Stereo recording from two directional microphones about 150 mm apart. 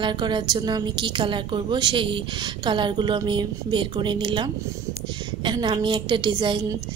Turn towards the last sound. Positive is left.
turn(degrees=-30)  # may be behind; listen again after turning